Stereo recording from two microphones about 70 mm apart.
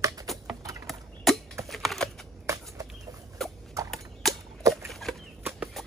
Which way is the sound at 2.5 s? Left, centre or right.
Right.